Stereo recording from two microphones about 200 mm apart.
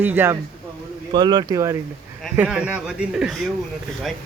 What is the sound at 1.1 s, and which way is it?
Speech, 20° right (ahead or behind).